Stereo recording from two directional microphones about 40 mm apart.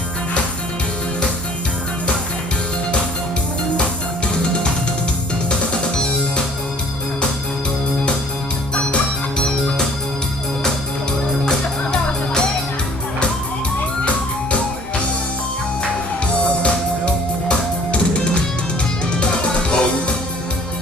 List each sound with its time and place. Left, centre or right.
5.5 s music: left
8.7 s music: left
9.4 s organ: centre
11.4 s music: centre
16.2 s music: left